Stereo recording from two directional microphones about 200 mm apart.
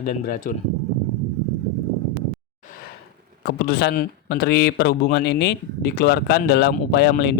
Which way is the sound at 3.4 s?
55° left (ahead or behind).